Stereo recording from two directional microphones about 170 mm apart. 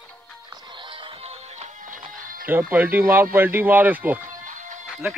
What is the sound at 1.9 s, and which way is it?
Music, 55° right (ahead or behind).